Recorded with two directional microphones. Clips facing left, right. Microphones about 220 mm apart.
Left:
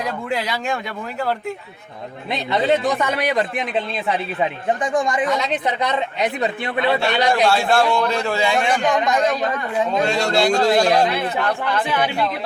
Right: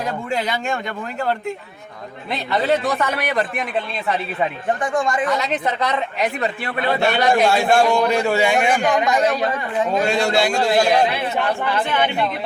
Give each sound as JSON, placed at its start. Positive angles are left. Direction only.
{"t": 0.3, "sound": "speech", "side_deg": 0}
{"t": 2.8, "sound": "speech", "side_deg": 15}
{"t": 4.8, "sound": "speech", "side_deg": 15}
{"t": 7.4, "sound": "a man's voice", "side_deg": -15}